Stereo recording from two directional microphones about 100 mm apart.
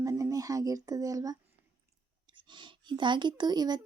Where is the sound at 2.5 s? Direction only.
50° right (ahead or behind).